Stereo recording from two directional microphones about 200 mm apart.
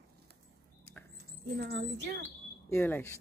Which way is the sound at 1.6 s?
55° right (ahead or behind).